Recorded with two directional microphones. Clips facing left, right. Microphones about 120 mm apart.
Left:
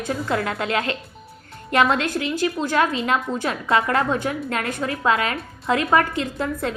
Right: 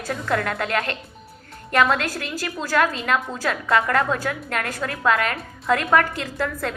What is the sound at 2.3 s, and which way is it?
A woman's voice, 25° left (ahead or behind).